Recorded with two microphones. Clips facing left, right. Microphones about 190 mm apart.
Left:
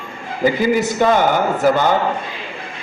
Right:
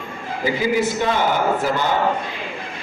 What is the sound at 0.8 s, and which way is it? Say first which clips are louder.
Speech: left 4 dB; 45° left (ahead or behind).